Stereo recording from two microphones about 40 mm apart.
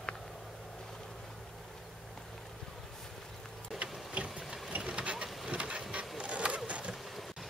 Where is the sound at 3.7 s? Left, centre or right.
Right.